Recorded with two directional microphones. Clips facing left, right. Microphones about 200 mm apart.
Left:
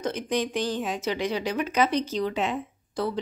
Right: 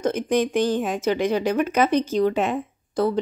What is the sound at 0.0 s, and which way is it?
A woman's voice, 50° right (ahead or behind).